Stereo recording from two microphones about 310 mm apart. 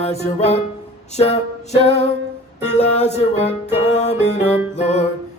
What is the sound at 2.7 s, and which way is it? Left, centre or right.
Music, left.